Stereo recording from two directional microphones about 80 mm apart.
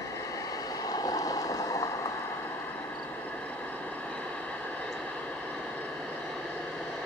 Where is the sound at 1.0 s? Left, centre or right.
Left.